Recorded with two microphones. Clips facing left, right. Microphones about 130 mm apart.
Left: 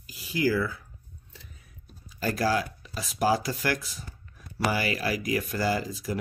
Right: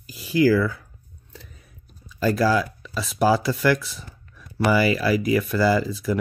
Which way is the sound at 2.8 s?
90° right.